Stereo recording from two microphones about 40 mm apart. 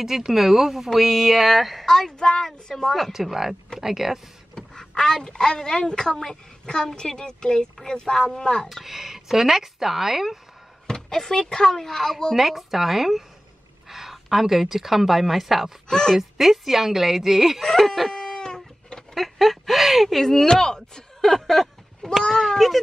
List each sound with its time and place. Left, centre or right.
0.0 s a woman's voice: centre
1.9 s speech: centre
2.7 s a woman's voice: centre
3.1 s a woman's voice: centre
4.6 s a woman's voice: centre
8.6 s a woman's voice: centre
10.9 s speech: centre
12.4 s a woman's voice: centre
13.8 s a sound: centre
14.1 s a woman's voice: centre
15.9 s speech: centre
16.2 s a woman's voice: centre
17.6 s chicken: centre
19.1 s speech: centre